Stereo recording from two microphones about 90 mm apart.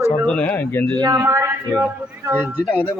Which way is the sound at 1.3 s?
35° right (ahead or behind).